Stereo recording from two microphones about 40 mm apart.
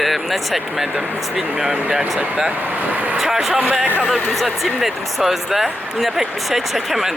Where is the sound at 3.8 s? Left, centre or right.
Right.